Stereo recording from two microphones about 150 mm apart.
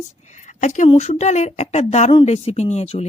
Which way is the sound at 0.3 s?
55° left (ahead or behind).